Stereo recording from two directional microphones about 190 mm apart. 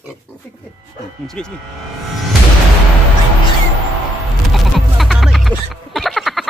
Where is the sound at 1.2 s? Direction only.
5° left (ahead or behind).